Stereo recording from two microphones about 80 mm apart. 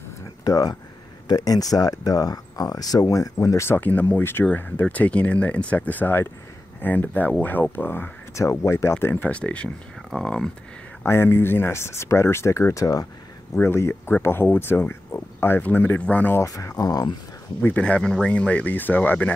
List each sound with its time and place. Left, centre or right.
0.5 s speech: left
3.6 s speech: left
8.4 s speech: left; by 10.5 s centre
11.1 s speech: left
13.6 s speech: left
16.3 s speech: left
17.6 s speech: centre